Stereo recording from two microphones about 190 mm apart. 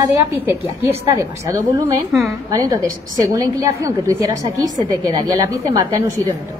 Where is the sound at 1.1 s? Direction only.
15° right (ahead or behind).